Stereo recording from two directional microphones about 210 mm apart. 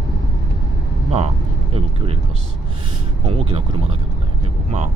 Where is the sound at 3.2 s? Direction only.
25° right (ahead or behind).